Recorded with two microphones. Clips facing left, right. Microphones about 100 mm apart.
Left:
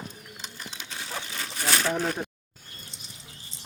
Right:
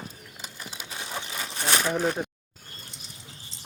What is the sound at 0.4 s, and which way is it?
Bird, 5° right (ahead or behind).